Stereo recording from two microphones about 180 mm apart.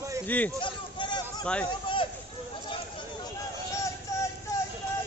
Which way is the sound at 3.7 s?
15° left (ahead or behind).